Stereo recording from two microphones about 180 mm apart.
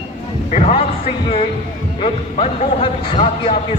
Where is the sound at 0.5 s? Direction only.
35° left (ahead or behind).